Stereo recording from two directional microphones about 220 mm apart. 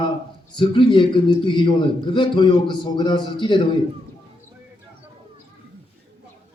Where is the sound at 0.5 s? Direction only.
20° left (ahead or behind).